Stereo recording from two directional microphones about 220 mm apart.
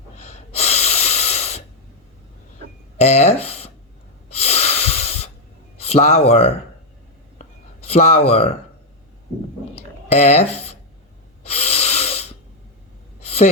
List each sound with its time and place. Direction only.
0.2 s snort: 30° left (ahead or behind)
3.0 s speech: 30° left (ahead or behind)
4.3 s snort: 30° left (ahead or behind)
5.8 s speech: 30° left (ahead or behind)
7.9 s speech: 30° left (ahead or behind)
10.1 s speech: 30° left (ahead or behind)
11.4 s wheeze: 30° left (ahead or behind)
13.2 s sigh: 30° left (ahead or behind)